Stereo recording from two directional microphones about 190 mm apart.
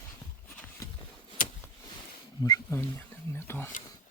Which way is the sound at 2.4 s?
15° left (ahead or behind).